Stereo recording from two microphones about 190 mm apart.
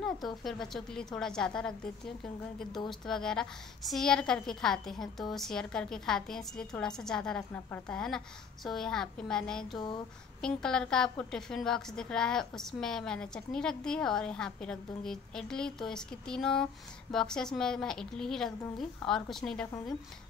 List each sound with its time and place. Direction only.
0.4 s a woman's voice: centre (ahead or behind)
2.9 s a woman's voice: 5° left (ahead or behind)
9.8 s a sound: 25° left (ahead or behind)
10.4 s a woman's voice: 5° left (ahead or behind)